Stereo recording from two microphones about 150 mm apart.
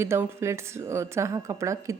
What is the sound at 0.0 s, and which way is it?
Speech, 15° right (ahead or behind).